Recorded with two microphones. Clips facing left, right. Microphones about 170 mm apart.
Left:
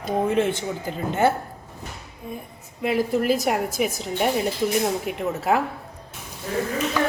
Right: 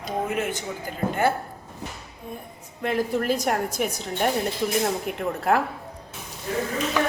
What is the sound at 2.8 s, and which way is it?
A woman's voice, 5° left (ahead or behind).